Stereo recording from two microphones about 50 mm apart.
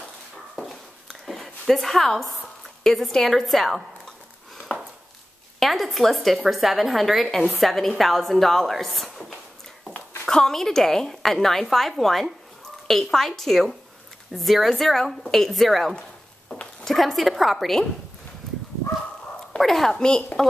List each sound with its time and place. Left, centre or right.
0.6 s a sound: centre
2.8 s a woman's voice: centre
4.7 s chopping: left
5.6 s a woman's voice: centre
19.6 s a woman's voice: centre